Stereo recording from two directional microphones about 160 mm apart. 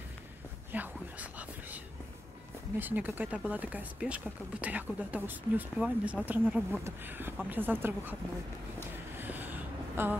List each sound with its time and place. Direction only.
0.7 s whispering: 10° right (ahead or behind)
2.8 s speech: 10° right (ahead or behind)
9.2 s a sound: 10° right (ahead or behind)